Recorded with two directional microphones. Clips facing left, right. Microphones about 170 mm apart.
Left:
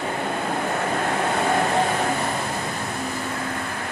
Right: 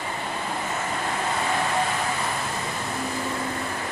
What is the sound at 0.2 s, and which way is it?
Vehicle, 55° left (ahead or behind).